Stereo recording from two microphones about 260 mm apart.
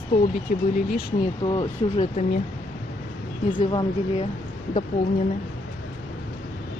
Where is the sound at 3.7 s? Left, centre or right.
Left.